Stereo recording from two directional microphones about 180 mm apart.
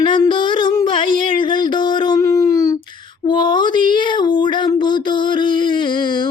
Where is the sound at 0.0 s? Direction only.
25° left (ahead or behind).